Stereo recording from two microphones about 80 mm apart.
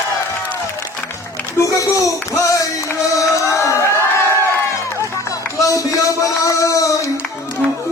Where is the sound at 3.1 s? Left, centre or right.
Left.